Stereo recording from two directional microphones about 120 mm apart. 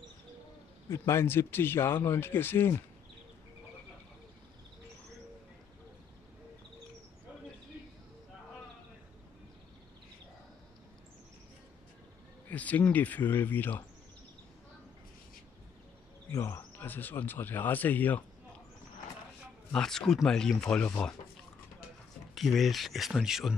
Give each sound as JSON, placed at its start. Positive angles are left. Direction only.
{"t": 0.8, "sound": "speech", "side_deg": 20}
{"t": 12.4, "sound": "speech", "side_deg": 15}
{"t": 16.3, "sound": "speech", "side_deg": 25}
{"t": 19.7, "sound": "speech", "side_deg": 5}
{"t": 22.3, "sound": "speech", "side_deg": 0}